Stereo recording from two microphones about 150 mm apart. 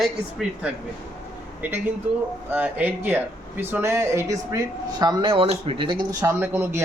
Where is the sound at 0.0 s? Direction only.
Centre (ahead or behind).